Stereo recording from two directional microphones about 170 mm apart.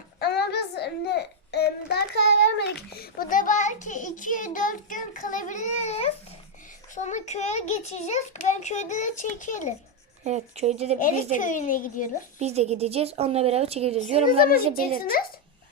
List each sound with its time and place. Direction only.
0.2 s a child's voice: 70° left (ahead or behind); by 9.7 s 45° left (ahead or behind)
10.2 s a woman's voice: 40° right (ahead or behind)
11.0 s a child's voice: 50° left (ahead or behind)
12.4 s a woman's voice: 40° right (ahead or behind)
14.7 s a child's voice: 60° left (ahead or behind)